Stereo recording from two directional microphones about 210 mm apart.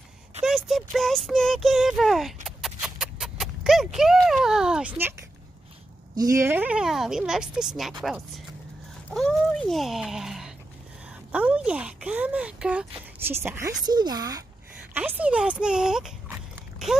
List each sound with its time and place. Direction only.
0.4 s speech: centre (ahead or behind)
2.4 s a sound: centre (ahead or behind)
6.1 s speech: 15° right (ahead or behind)
9.1 s a woman's voice: centre (ahead or behind); by 14.4 s 15° right (ahead or behind)
15.0 s speech: 5° right (ahead or behind)